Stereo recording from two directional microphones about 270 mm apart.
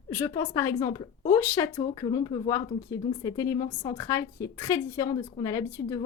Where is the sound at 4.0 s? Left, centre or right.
Centre.